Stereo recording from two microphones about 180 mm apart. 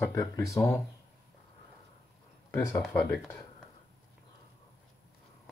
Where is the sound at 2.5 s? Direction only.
15° left (ahead or behind).